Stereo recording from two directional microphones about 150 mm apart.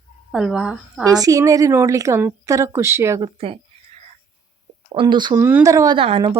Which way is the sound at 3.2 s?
35° right (ahead or behind).